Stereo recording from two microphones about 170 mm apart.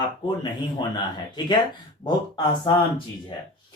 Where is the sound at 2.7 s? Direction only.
25° left (ahead or behind).